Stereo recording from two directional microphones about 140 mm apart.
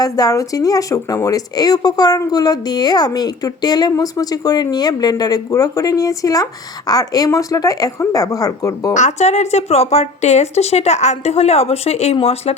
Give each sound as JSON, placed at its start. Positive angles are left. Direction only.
{"t": 0.0, "sound": "speech", "side_deg": 25}
{"t": 9.0, "sound": "speech", "side_deg": 55}